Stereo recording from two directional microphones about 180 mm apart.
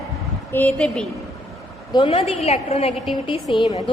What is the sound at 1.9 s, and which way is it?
A woman's voice, 30° left (ahead or behind).